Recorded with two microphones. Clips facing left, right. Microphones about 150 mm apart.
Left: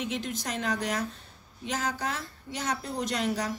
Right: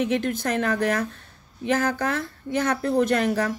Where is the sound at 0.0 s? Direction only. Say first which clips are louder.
Right 9 dB; 55° right (ahead or behind).